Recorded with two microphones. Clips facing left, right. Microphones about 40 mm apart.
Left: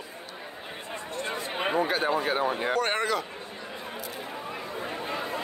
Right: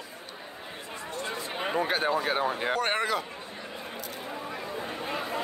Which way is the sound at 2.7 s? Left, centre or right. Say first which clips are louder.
Left 1 dB; centre.